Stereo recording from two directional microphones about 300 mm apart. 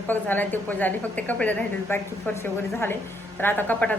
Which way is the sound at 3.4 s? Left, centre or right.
Centre.